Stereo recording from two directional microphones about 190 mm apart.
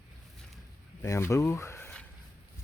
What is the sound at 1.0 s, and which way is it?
Speech, 15° left (ahead or behind).